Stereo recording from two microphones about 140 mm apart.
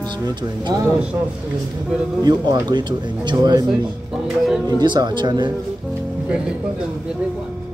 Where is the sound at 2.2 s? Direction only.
30° right (ahead or behind).